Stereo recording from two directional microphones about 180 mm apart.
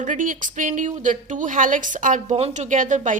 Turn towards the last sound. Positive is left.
turn(degrees=-45)  # may be behind; listen again after turning